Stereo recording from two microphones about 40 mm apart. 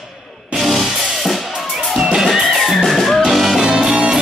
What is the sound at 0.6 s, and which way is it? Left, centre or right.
Music, centre.